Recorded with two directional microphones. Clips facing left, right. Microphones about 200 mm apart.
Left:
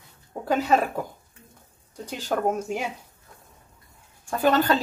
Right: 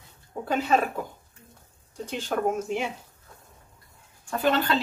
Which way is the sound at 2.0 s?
40° left (ahead or behind).